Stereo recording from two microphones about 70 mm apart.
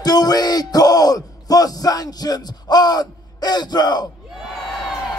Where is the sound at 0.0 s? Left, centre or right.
Left.